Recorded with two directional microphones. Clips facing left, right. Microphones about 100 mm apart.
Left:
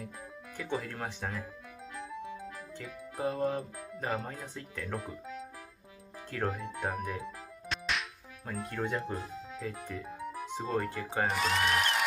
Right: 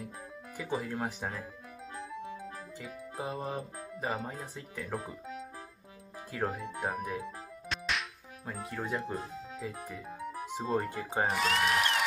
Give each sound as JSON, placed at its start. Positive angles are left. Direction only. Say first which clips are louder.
{"t": 0.7, "sound": "speech", "louder": "right 3 dB", "side_deg": -15}
{"t": 2.0, "sound": "music", "louder": "even", "side_deg": 0}
{"t": 3.9, "sound": "speech", "louder": "even", "side_deg": 0}
{"t": 6.3, "sound": "speech", "louder": "even", "side_deg": -5}
{"t": 9.6, "sound": "music", "louder": "left 2 dB", "side_deg": -5}
{"t": 10.8, "sound": "speech", "louder": "even", "side_deg": -15}
{"t": 11.2, "sound": "speech", "louder": "even", "side_deg": 0}